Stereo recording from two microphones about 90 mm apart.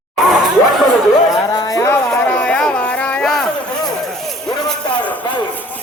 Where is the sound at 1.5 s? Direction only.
45° left (ahead or behind).